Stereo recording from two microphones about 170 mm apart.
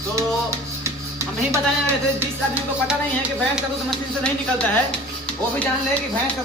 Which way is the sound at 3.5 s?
5° left (ahead or behind).